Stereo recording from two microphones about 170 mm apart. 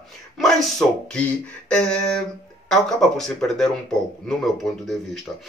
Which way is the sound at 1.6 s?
5° left (ahead or behind).